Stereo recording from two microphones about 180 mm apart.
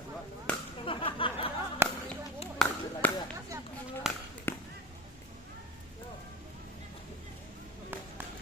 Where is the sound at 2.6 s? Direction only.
5° left (ahead or behind).